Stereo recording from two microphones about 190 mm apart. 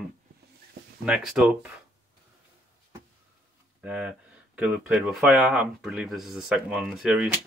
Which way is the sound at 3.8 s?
5° right (ahead or behind).